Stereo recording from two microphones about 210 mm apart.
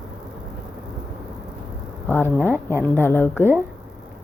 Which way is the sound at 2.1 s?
10° left (ahead or behind).